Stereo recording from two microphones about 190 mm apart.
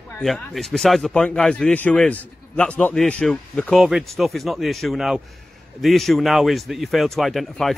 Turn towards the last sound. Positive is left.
turn(degrees=0)  # may be behind; listen again after turning